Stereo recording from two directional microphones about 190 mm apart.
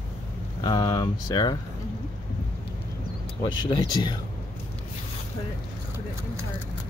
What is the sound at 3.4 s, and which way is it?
Speech, 25° left (ahead or behind).